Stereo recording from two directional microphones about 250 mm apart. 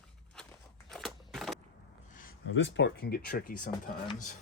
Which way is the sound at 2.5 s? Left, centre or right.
Left.